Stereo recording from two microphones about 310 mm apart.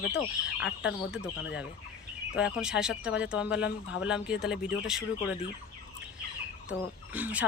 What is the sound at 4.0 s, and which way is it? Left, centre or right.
Speech, centre.